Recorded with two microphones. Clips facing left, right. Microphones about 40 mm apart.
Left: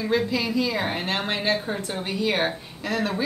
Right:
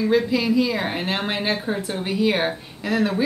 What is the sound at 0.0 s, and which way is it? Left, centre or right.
A woman's voice, centre.